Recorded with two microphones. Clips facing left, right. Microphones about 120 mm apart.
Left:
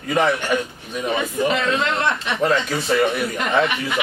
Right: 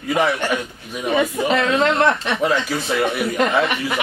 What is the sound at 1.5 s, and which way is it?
Speech, 40° right (ahead or behind).